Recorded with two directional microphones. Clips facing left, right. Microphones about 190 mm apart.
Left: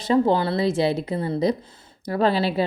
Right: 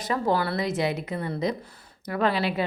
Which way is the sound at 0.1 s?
25° left (ahead or behind).